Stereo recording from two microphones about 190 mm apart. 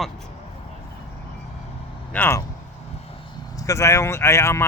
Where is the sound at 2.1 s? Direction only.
10° left (ahead or behind).